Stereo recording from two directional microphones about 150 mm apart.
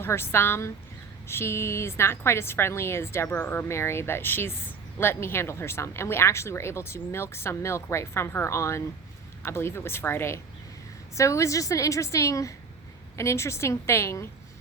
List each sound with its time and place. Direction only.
0.0 s a woman's voice: 15° left (ahead or behind)